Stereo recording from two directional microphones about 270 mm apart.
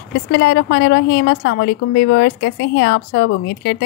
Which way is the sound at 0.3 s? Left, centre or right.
Left.